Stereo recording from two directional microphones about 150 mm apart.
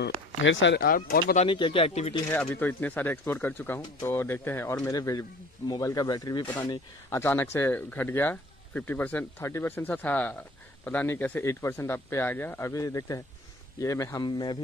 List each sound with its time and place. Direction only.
0.7 s speech: 75° left (ahead or behind)
1.4 s speech: 35° left (ahead or behind)
2.3 s speech: 10° left (ahead or behind)
7.1 s speech: 15° left (ahead or behind)